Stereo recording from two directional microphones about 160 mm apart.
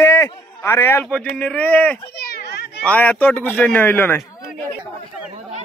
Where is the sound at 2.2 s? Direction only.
90° left.